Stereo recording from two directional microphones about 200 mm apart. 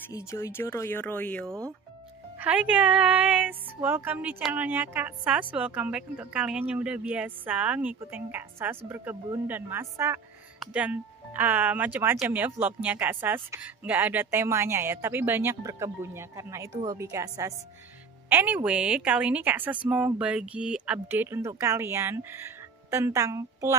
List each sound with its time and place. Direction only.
0.1 s speech: 15° left (ahead or behind)
2.3 s speech: 5° right (ahead or behind)